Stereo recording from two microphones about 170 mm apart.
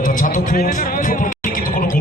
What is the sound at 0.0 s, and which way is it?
Music, 50° left (ahead or behind).